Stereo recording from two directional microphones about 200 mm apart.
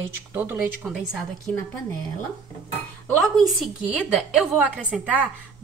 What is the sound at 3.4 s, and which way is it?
A woman's voice, centre (ahead or behind).